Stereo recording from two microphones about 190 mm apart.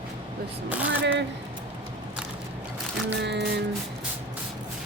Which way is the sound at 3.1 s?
65° right (ahead or behind).